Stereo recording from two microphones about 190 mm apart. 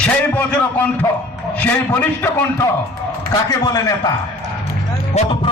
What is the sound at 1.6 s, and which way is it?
Speech, 10° left (ahead or behind).